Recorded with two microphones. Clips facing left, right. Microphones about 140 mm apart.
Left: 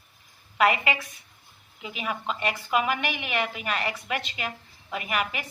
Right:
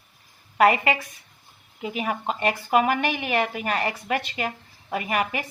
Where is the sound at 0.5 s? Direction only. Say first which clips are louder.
Right 4 dB; 40° right (ahead or behind).